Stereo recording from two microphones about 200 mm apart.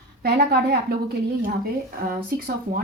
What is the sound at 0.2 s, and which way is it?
Speech, 50° right (ahead or behind).